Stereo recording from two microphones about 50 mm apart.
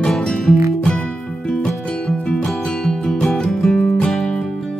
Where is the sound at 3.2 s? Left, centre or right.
Centre.